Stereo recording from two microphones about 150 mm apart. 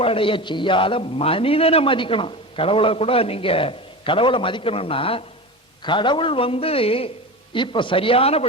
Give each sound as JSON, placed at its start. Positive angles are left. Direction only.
{"t": 0.0, "sound": "a man's voice", "side_deg": 35}